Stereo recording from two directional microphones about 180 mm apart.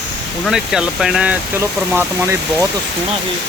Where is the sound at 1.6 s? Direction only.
15° right (ahead or behind).